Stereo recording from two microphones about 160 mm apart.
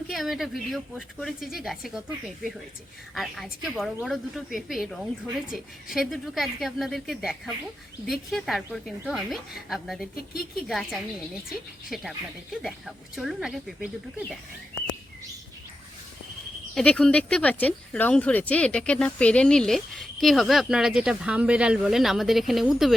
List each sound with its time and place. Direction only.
0.1 s speech: centre (ahead or behind)
3.2 s speech: centre (ahead or behind)
16.7 s speech: 5° left (ahead or behind)